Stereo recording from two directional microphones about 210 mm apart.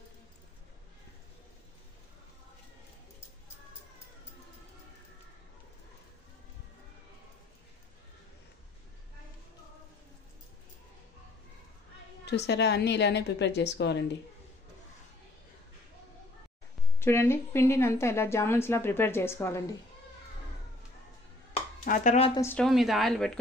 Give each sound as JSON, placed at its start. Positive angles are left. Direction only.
{"t": 12.4, "sound": "a woman's voice", "side_deg": 55}
{"t": 17.0, "sound": "a woman's voice", "side_deg": 10}
{"t": 21.5, "sound": "a sound", "side_deg": 35}
{"t": 22.3, "sound": "a woman's voice", "side_deg": 10}